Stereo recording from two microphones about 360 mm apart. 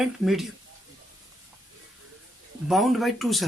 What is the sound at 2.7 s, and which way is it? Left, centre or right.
Speech, centre.